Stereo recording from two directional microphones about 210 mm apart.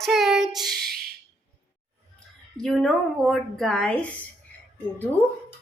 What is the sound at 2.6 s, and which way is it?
A woman's voice, centre (ahead or behind).